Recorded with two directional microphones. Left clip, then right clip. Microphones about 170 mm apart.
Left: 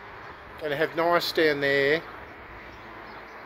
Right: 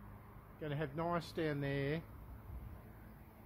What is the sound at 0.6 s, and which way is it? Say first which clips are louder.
Speech: left 16 dB; 5° right (ahead or behind).